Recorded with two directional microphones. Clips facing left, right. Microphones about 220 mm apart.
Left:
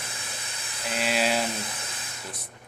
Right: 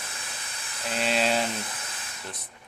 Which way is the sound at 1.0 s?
5° left (ahead or behind).